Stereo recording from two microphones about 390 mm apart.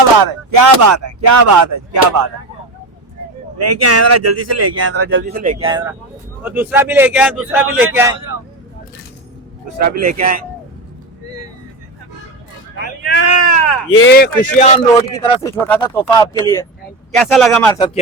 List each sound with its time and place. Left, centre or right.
0.2 s speech: right
3.6 s a man's voice: right; by 8.1 s centre
9.8 s speech: right
12.8 s a sound: left
13.3 s a sound: left
13.9 s a man's voice: left; by 17.8 s centre